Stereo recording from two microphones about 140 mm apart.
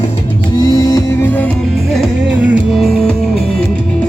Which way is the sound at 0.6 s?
25° left (ahead or behind).